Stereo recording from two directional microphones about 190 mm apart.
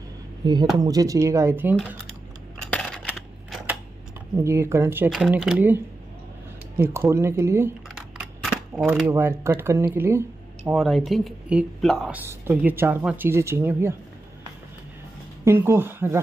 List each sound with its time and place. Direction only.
0.4 s speech: 20° right (ahead or behind)
2.6 s coin: 5° left (ahead or behind)
3.1 s typewriter: 5° right (ahead or behind)
4.4 s speech: 15° right (ahead or behind)
6.8 s speech: 10° right (ahead or behind)
8.7 s speech: 10° right (ahead or behind)
10.7 s speech: centre (ahead or behind)
15.4 s speech: 10° right (ahead or behind)